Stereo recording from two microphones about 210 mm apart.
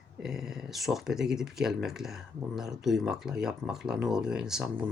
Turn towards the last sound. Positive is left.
turn(degrees=-5)  # may be behind; listen again after turning